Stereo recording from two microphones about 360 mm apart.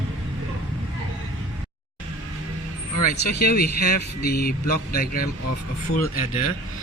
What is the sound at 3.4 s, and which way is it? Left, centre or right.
Speech, left.